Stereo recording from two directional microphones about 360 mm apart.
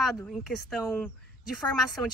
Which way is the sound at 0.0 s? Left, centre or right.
Centre.